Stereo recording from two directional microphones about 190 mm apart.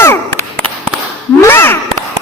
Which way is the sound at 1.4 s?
10° left (ahead or behind).